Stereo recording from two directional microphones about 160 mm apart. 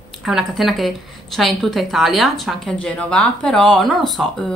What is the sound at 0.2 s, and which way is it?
Speech, 5° right (ahead or behind).